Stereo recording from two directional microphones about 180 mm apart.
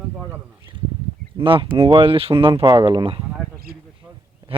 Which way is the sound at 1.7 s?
30° right (ahead or behind).